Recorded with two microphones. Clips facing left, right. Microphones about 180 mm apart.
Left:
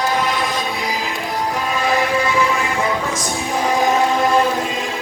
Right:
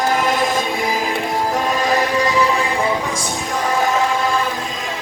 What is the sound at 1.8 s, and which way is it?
Music, 40° right (ahead or behind).